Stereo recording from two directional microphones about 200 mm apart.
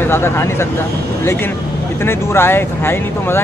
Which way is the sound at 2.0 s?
10° left (ahead or behind).